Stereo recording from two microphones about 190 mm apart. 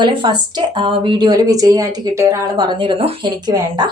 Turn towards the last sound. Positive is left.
turn(degrees=-20)  # may be behind; listen again after turning